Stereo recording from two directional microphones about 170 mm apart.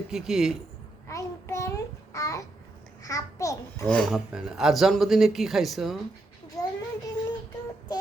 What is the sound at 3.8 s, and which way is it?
Speech, 5° left (ahead or behind).